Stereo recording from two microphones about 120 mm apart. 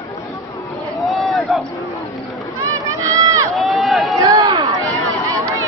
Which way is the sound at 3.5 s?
Centre (ahead or behind).